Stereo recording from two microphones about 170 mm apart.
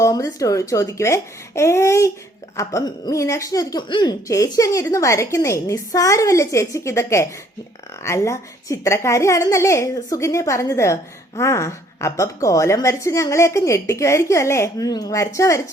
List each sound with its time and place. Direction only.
0.0 s a woman's voice: 20° left (ahead or behind)